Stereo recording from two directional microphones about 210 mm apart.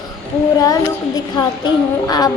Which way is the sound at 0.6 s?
20° left (ahead or behind).